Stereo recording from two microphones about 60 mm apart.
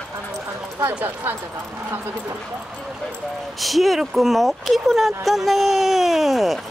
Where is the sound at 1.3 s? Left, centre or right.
Right.